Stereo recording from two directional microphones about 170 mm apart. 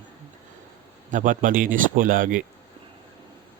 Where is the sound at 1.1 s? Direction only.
50° right (ahead or behind).